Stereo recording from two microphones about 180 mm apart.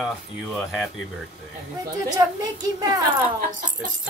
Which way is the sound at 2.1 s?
20° right (ahead or behind).